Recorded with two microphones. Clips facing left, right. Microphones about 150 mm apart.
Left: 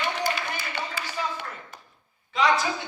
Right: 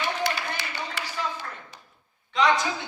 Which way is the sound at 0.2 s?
75° right (ahead or behind).